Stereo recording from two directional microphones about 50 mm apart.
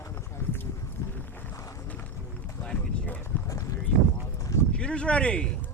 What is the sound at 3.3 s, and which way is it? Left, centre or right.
Run, left.